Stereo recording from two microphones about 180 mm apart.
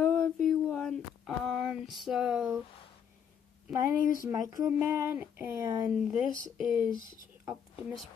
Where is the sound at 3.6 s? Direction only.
10° right (ahead or behind).